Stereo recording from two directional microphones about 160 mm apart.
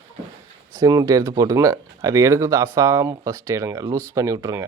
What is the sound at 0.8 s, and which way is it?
Speech, 20° right (ahead or behind).